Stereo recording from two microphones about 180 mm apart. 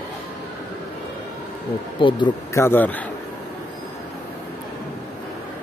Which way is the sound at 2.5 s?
10° left (ahead or behind).